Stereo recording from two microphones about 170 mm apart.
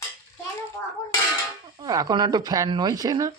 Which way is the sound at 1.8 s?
20° right (ahead or behind).